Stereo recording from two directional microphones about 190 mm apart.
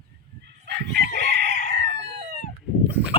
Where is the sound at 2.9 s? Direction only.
10° right (ahead or behind).